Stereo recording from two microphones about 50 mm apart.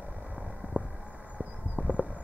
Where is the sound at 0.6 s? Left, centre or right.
Right.